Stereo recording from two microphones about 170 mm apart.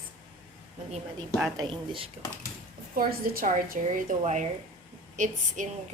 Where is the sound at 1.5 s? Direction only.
30° right (ahead or behind).